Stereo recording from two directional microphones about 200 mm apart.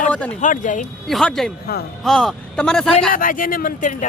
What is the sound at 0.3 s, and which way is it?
Speech, 40° left (ahead or behind).